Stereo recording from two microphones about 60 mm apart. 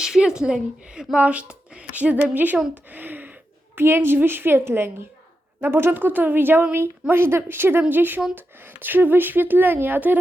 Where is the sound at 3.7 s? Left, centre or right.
Right.